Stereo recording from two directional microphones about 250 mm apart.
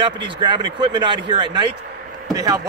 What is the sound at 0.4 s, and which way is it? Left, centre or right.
Speech, centre.